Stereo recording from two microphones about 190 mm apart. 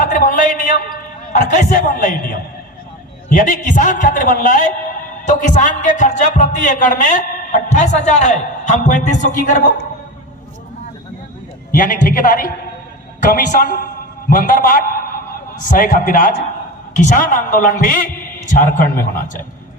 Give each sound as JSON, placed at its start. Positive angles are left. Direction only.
{"t": 0.0, "sound": "a sound", "side_deg": 45}
{"t": 1.3, "sound": "a man's voice", "side_deg": 45}
{"t": 11.8, "sound": "a man's voice", "side_deg": 45}
{"t": 13.5, "sound": "a man's voice", "side_deg": 45}